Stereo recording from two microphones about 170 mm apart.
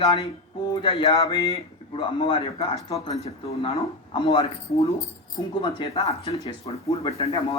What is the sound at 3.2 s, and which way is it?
Speech, 35° left (ahead or behind).